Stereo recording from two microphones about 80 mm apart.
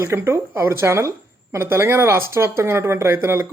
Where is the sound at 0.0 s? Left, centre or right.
Right.